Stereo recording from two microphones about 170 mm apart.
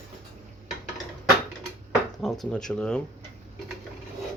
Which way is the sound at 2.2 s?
Centre (ahead or behind).